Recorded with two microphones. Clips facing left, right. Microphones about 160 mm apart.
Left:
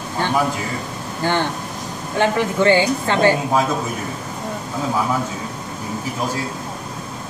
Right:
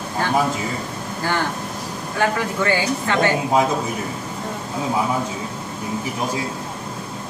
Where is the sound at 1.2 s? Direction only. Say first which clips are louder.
Left 3 dB; 25° left (ahead or behind).